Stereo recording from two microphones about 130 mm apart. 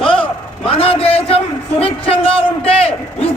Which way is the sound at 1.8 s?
45° left (ahead or behind).